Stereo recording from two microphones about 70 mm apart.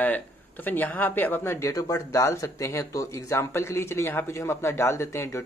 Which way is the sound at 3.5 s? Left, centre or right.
Left.